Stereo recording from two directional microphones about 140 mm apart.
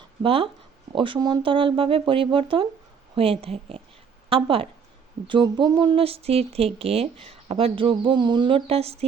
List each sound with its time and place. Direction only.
0.2 s a woman's voice: 40° right (ahead or behind)